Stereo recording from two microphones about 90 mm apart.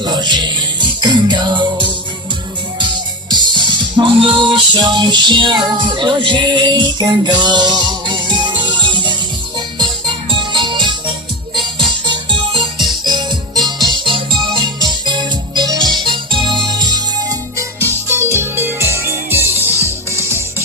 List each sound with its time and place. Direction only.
0.0 s music: 55° right (ahead or behind)
3.2 s music: 55° right (ahead or behind)
12.0 s music: 65° right (ahead or behind)
13.8 s music: 65° right (ahead or behind)
17.6 s music: 30° right (ahead or behind)